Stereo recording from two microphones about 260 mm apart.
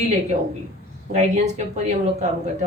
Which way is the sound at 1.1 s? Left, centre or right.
Right.